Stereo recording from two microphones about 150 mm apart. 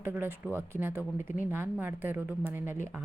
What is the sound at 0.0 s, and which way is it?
Speech, 15° right (ahead or behind).